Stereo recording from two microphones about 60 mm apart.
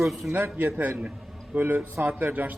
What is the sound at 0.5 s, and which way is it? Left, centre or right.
Speech, right.